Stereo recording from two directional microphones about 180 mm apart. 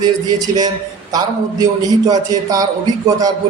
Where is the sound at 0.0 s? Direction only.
20° right (ahead or behind).